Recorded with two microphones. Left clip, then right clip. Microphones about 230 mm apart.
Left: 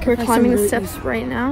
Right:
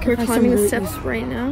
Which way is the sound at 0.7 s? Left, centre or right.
Left.